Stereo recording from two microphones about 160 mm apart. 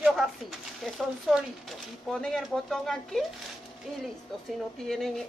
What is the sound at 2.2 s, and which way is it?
Speech, centre (ahead or behind).